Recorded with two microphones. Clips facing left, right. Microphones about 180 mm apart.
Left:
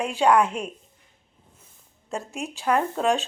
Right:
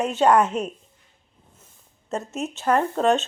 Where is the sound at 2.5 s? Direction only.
5° left (ahead or behind).